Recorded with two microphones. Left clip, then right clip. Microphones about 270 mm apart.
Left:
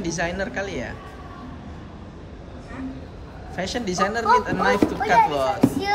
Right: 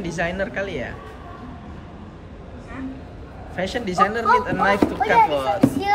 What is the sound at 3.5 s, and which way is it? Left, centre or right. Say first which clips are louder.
Speech: right 3 dB; centre.